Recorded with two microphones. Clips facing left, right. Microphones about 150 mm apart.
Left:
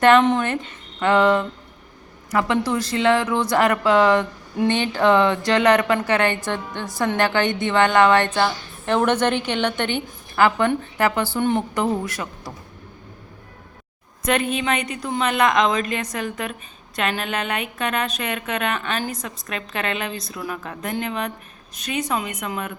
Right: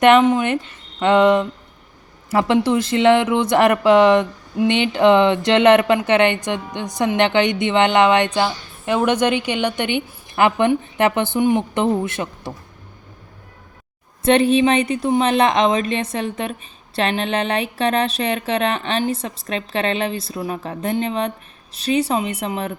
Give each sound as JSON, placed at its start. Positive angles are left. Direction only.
{"t": 0.0, "sound": "a woman's voice", "side_deg": -15}
{"t": 11.7, "sound": "a woman's voice", "side_deg": -25}
{"t": 14.3, "sound": "a woman's voice", "side_deg": -30}